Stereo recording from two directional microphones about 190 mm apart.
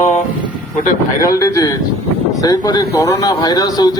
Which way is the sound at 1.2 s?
15° left (ahead or behind).